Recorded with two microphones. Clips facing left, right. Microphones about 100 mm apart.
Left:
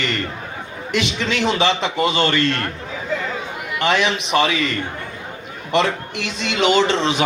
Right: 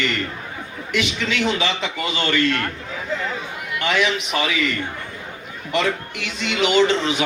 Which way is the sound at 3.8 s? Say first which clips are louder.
Left 2 dB; 25° left (ahead or behind).